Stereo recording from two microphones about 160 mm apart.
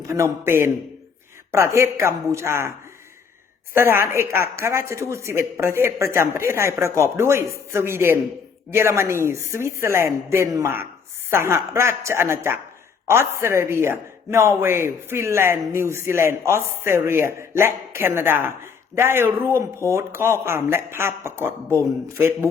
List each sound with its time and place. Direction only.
0.1 s a woman's voice: 15° right (ahead or behind)
3.8 s a woman's voice: 15° right (ahead or behind)